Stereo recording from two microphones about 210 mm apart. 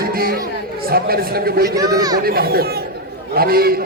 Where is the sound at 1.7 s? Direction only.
20° right (ahead or behind).